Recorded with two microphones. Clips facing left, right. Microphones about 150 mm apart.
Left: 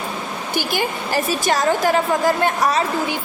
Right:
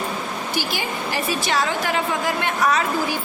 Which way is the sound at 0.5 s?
50° left (ahead or behind).